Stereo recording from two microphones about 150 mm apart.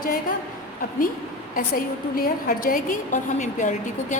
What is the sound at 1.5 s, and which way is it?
A woman's voice, 70° left (ahead or behind).